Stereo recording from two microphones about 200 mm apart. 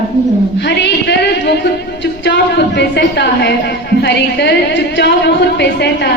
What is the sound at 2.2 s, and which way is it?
A woman's voice, 60° left (ahead or behind).